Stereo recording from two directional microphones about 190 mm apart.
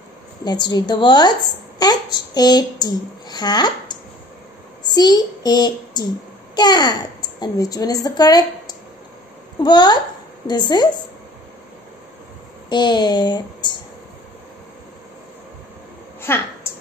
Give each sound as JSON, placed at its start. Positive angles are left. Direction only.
{"t": 0.4, "sound": "a woman's voice", "side_deg": 20}
{"t": 12.6, "sound": "a woman's voice", "side_deg": 25}
{"t": 16.2, "sound": "a woman's voice", "side_deg": 10}